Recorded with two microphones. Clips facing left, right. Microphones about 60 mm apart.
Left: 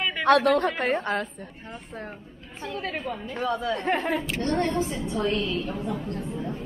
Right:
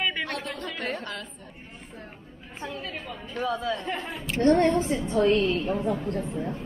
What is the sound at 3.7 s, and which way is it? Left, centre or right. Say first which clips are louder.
Speech: left 7 dB; left.